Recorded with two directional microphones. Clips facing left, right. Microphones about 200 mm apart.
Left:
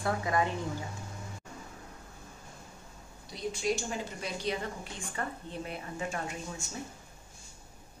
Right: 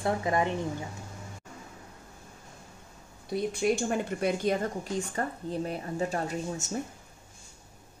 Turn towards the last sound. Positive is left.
turn(degrees=-40)  # may be behind; listen again after turning